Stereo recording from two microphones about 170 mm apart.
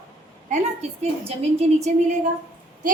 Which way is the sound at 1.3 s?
40° right (ahead or behind).